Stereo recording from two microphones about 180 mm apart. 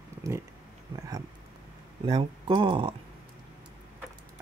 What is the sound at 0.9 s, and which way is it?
Speech, 20° right (ahead or behind).